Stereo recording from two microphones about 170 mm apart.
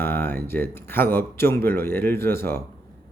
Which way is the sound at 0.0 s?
10° left (ahead or behind).